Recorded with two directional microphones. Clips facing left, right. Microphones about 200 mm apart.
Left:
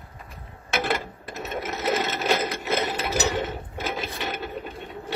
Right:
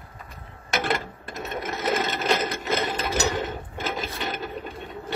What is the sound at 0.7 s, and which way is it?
Sewing machine, 5° left (ahead or behind).